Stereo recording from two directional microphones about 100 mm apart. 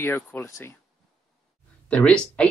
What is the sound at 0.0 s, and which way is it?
Speech, 20° left (ahead or behind).